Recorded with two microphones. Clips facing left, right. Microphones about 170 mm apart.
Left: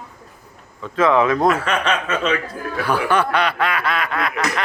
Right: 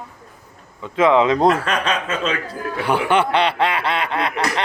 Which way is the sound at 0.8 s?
20° right (ahead or behind).